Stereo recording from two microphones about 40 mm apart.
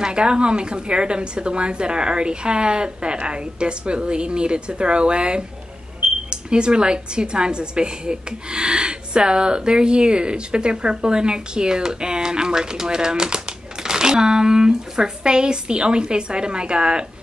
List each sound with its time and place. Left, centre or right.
0.0 s a woman's voice: right
6.0 s a sound: right
6.3 s a woman's voice: right